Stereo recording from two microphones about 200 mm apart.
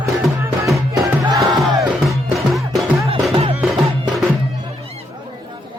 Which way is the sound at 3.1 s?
25° right (ahead or behind).